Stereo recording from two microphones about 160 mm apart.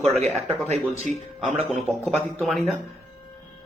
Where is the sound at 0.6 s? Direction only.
45° right (ahead or behind).